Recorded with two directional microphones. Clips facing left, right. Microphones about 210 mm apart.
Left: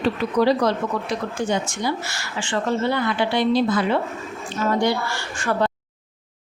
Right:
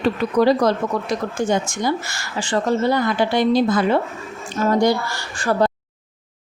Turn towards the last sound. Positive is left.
turn(degrees=-35)  # may be behind; listen again after turning